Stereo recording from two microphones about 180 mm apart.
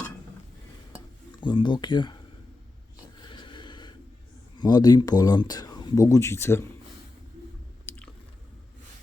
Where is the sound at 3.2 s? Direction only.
25° left (ahead or behind).